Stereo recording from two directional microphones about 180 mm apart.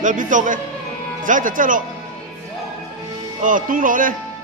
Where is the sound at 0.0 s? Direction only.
45° right (ahead or behind).